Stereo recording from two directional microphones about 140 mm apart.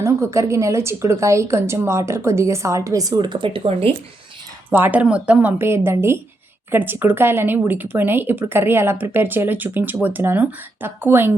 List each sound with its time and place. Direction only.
0.0 s a woman's voice: 20° right (ahead or behind); by 3.9 s 40° right (ahead or behind)
4.7 s speech: 15° right (ahead or behind)